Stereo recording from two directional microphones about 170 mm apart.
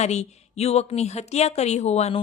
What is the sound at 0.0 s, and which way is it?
Speech, 40° left (ahead or behind).